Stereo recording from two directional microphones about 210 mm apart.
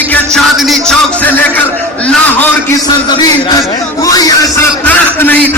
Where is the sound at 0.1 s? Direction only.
Centre (ahead or behind).